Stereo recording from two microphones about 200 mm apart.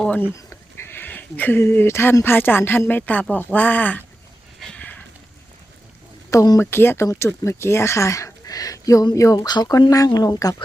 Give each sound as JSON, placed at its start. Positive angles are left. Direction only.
{"t": 0.0, "sound": "bleat", "side_deg": 5}
{"t": 0.5, "sound": "speech", "side_deg": 10}
{"t": 4.7, "sound": "a sound", "side_deg": 5}
{"t": 6.3, "sound": "speech", "side_deg": 15}